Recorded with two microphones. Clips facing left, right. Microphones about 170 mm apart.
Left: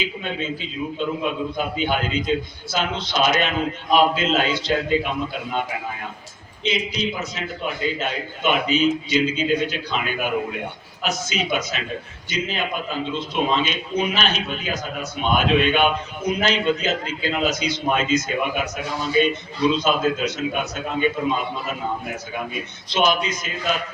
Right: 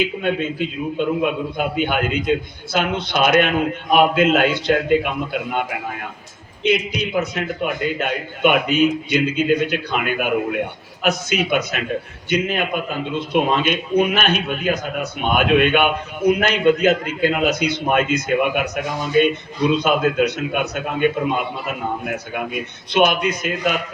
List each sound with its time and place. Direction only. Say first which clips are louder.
0.0 s a man's voice: right 7 dB; 55° right (ahead or behind)
22.9 s a man's voice: right 4 dB; 60° right (ahead or behind)